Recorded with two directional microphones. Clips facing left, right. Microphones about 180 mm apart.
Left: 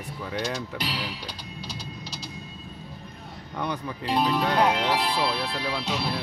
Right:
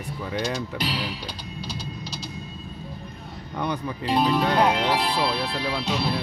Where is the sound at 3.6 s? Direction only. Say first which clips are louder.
Right 3 dB; centre (ahead or behind).